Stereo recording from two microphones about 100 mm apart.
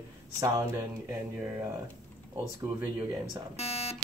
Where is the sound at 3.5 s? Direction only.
90° left.